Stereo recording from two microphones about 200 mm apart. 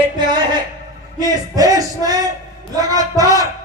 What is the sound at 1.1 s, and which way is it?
Speech, 20° right (ahead or behind).